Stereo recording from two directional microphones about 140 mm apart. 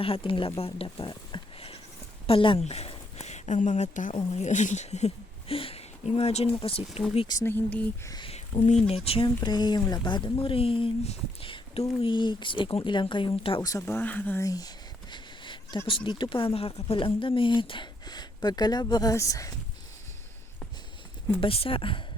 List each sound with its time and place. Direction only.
0.0 s speech: 40° left (ahead or behind)
0.6 s sheep: 40° left (ahead or behind)
2.2 s speech: 40° left (ahead or behind)
7.4 s speech: 15° left (ahead or behind)
8.0 s speech: 30° left (ahead or behind)
8.3 s speech: 50° left (ahead or behind)
9.4 s speech: 30° left (ahead or behind)
13.6 s speech: 25° left (ahead or behind)
14.4 s speech: 25° left (ahead or behind)
15.1 s a sound: 35° left (ahead or behind)
15.9 s speech: 35° left (ahead or behind)
21.4 s speech: 40° left (ahead or behind)